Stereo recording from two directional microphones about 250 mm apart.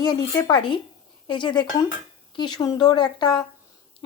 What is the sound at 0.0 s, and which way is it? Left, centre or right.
Speech, centre.